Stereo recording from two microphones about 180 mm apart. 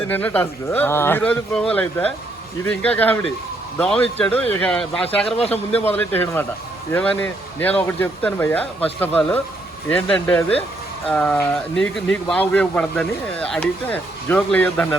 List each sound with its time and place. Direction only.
0.1 s speech: 10° left (ahead or behind)
5.2 s speech: 35° left (ahead or behind)
5.7 s speech: 10° left (ahead or behind)